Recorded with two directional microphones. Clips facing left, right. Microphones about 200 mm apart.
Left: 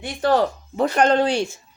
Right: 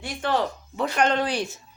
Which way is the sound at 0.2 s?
40° left (ahead or behind).